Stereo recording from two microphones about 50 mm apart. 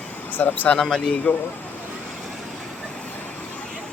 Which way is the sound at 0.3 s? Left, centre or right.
Left.